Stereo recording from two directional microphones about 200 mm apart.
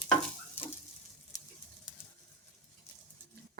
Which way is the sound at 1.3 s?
20° left (ahead or behind).